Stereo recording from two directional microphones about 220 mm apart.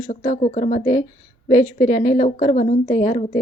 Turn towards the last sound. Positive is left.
turn(degrees=25)  # may be behind; listen again after turning